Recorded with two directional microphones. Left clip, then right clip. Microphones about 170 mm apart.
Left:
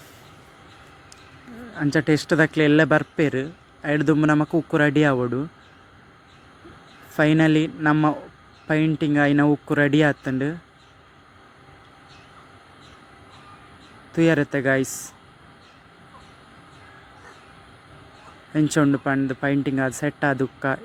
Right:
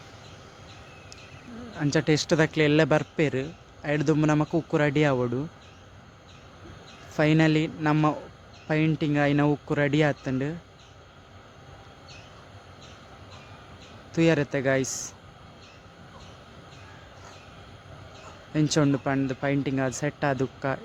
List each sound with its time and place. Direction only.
1.7 s speech: 15° left (ahead or behind)
7.2 s speech: 15° left (ahead or behind)
14.1 s speech: 15° left (ahead or behind)
18.5 s speech: 15° left (ahead or behind)